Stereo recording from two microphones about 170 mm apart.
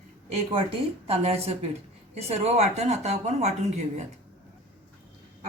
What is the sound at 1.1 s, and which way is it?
Speech, 35° right (ahead or behind).